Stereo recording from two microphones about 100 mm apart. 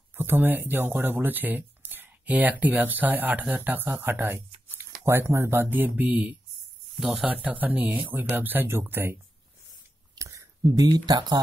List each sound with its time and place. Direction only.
0.1 s speech: 20° right (ahead or behind)
10.1 s a sound: 30° right (ahead or behind)
10.7 s speech: 40° right (ahead or behind)